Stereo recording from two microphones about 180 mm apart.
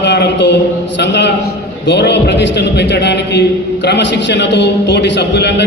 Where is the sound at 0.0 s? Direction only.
75° left (ahead or behind).